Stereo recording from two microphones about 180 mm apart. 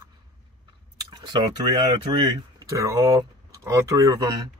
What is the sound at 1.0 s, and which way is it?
Chewing, 20° right (ahead or behind).